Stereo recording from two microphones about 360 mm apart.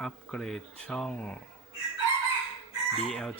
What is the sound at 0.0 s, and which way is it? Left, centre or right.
Speech, centre.